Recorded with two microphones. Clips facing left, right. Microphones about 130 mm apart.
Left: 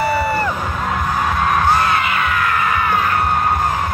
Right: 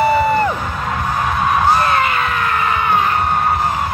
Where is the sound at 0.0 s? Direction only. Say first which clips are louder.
Right 4 dB; 20° right (ahead or behind).